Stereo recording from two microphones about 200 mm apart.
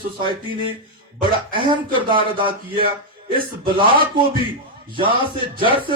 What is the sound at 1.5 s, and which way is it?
Speech, 25° right (ahead or behind).